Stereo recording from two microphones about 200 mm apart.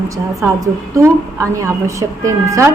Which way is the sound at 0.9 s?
15° right (ahead or behind).